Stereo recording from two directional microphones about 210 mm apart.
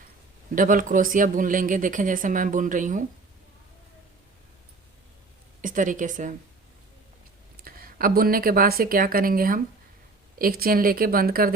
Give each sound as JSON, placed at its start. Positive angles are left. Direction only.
{"t": 0.5, "sound": "speech", "side_deg": -40}
{"t": 5.6, "sound": "speech", "side_deg": -40}
{"t": 7.6, "sound": "speech", "side_deg": -45}